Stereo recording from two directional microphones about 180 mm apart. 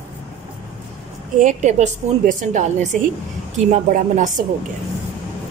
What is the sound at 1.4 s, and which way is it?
A woman's voice, 45° right (ahead or behind).